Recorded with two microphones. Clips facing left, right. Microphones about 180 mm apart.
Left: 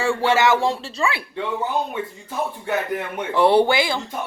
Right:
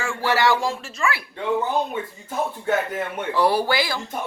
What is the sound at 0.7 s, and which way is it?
Speech, 30° left (ahead or behind).